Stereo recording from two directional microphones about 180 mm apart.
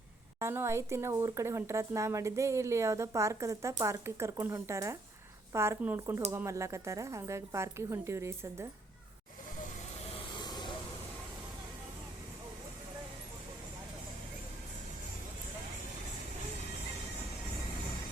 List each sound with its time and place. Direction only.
0.3 s speech: 15° right (ahead or behind)
10.3 s vehicle: 25° left (ahead or behind)